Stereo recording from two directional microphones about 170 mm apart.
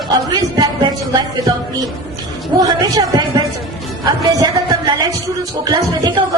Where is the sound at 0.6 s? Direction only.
25° right (ahead or behind).